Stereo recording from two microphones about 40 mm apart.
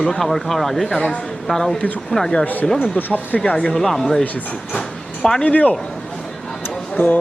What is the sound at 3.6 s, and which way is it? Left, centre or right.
Speech, centre.